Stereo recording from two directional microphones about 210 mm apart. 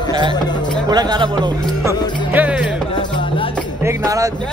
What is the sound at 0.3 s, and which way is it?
Speech, 20° left (ahead or behind).